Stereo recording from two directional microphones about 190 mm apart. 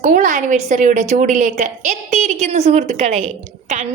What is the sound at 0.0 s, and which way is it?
A woman's voice, 45° right (ahead or behind).